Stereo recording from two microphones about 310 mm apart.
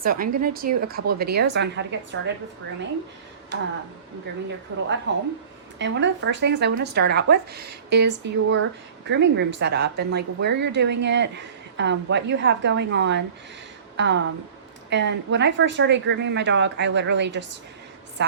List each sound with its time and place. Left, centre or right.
0.0 s speech: right
3.5 s speech: right
4.7 s a woman's voice: right